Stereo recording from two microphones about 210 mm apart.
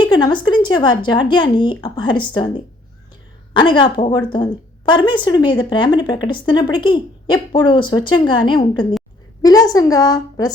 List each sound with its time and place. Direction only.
0.1 s speech: 20° left (ahead or behind)
3.5 s a woman's voice: 25° left (ahead or behind)